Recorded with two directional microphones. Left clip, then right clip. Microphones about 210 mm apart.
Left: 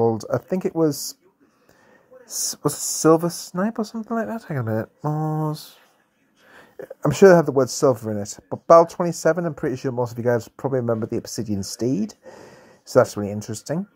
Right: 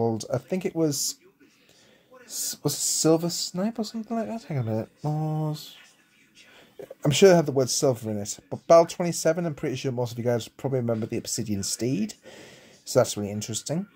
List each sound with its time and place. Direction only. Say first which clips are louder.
0.0 s a sound: left 6 dB; 15° left (ahead or behind)
0.3 s speech: left 5 dB; centre (ahead or behind)
0.7 s speech: left 4 dB; 15° left (ahead or behind)
2.2 s speech: left 6 dB; 10° right (ahead or behind)
3.0 s speech: left 6 dB; 15° left (ahead or behind)
4.6 s speech: left 5 dB; 15° left (ahead or behind)
5.5 s speech: left 4 dB; 15° right (ahead or behind)
7.1 s speech: left 5 dB; 15° left (ahead or behind)
8.0 s speech: left 5 dB; centre (ahead or behind)
8.3 s speech: left 5 dB; 15° left (ahead or behind)
9.3 s speech: left 4 dB; 5° left (ahead or behind)